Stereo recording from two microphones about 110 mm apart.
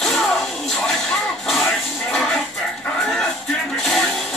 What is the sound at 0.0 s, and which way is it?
Music, centre (ahead or behind).